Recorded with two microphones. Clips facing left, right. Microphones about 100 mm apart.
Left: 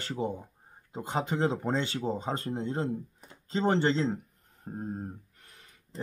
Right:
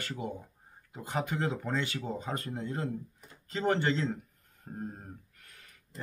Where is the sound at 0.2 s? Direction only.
30° left (ahead or behind).